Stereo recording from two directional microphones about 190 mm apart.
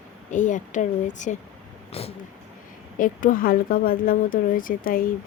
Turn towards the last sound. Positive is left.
turn(degrees=45)  # may be behind; listen again after turning